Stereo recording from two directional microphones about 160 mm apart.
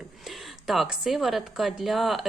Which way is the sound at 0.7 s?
Centre (ahead or behind).